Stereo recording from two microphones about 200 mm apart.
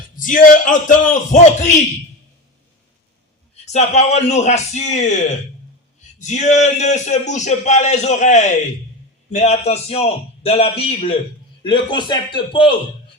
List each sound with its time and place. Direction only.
0.2 s a man's voice: 40° left (ahead or behind)
3.5 s a man's voice: 35° left (ahead or behind)
6.1 s a man's voice: 35° left (ahead or behind)